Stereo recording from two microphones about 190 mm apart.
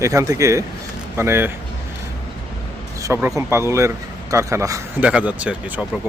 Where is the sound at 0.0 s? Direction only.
15° right (ahead or behind).